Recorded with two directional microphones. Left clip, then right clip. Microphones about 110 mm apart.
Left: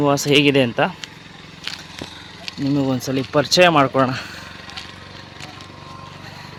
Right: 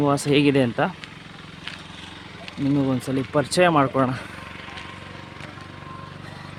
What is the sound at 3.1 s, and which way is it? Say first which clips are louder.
Speech: left 8 dB; 20° left (ahead or behind).